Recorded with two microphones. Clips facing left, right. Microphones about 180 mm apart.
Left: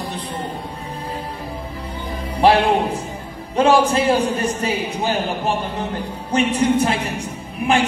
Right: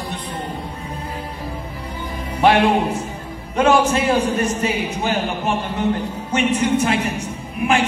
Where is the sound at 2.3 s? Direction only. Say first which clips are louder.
Even; 35° left (ahead or behind).